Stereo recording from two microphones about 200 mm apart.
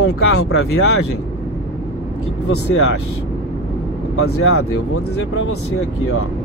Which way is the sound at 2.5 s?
90° left.